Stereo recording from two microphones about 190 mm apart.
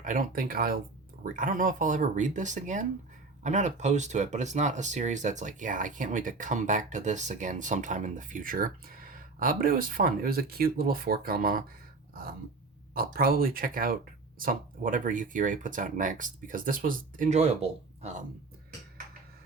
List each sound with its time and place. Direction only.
0.0 s speech: 45° right (ahead or behind)
12.9 s speech: 50° right (ahead or behind)